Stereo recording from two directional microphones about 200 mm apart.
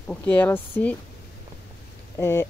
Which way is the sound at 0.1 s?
5° left (ahead or behind).